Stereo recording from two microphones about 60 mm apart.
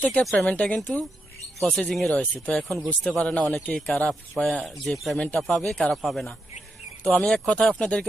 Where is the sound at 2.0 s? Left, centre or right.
Centre.